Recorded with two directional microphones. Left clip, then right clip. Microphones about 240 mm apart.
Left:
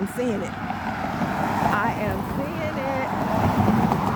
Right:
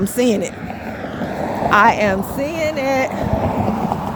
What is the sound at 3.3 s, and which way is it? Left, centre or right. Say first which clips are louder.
Vehicle: right 3 dB; left.